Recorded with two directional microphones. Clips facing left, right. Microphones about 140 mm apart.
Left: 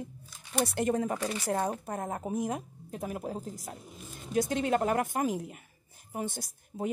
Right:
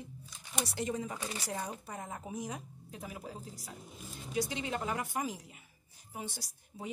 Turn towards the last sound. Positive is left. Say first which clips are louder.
# left 10 dB
turn(degrees=50)  # may be behind; listen again after turning